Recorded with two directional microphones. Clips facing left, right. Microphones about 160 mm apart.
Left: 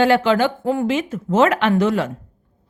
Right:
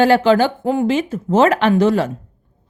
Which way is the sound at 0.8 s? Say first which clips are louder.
Right 3 dB; 35° right (ahead or behind).